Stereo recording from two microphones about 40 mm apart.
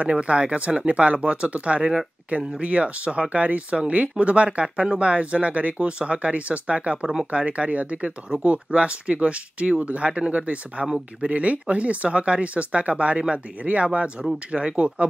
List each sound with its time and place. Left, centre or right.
0.0 s speech: right